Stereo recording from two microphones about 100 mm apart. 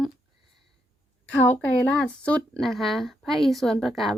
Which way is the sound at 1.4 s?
15° left (ahead or behind).